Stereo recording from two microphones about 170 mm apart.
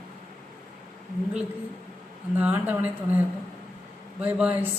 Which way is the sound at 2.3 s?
10° right (ahead or behind).